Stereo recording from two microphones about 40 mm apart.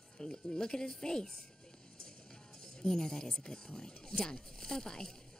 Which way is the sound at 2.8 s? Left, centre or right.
Centre.